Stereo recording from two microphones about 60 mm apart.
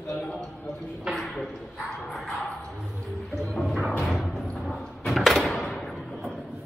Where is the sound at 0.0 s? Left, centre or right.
Left.